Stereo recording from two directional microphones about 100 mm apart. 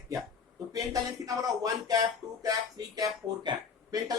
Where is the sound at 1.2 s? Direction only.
35° right (ahead or behind).